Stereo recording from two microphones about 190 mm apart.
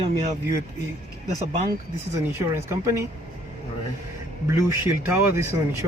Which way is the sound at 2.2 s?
10° right (ahead or behind).